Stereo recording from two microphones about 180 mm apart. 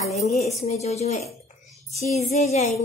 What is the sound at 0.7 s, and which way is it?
A woman's voice, 35° left (ahead or behind).